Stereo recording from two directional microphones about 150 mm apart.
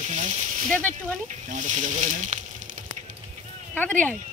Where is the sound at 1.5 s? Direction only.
55° right (ahead or behind).